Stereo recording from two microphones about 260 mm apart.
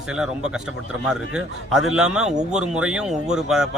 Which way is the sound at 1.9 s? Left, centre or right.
Centre.